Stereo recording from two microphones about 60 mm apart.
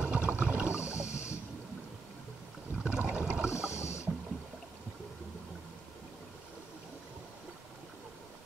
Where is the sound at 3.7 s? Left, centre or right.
Left.